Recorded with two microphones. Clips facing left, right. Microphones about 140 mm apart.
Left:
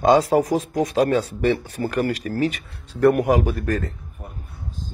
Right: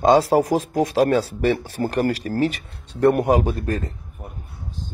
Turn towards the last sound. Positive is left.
turn(degrees=-25)  # may be behind; listen again after turning